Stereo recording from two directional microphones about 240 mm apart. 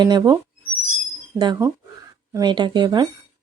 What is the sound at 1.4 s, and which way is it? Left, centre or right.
Speech, centre.